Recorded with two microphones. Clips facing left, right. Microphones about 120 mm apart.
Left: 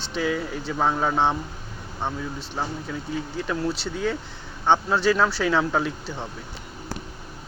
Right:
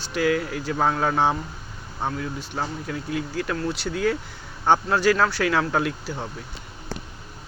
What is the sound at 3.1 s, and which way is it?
Speech, 90° right.